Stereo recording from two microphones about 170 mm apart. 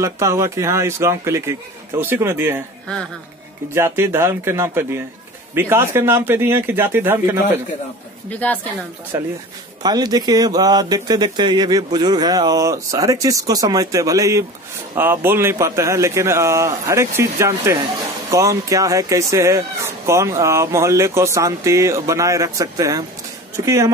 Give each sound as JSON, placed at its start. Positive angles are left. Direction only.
{"t": 0.0, "sound": "speech", "side_deg": -15}
{"t": 3.7, "sound": "speech", "side_deg": -15}
{"t": 8.3, "sound": "a woman's voice", "side_deg": 10}
{"t": 9.1, "sound": "a man's voice", "side_deg": -15}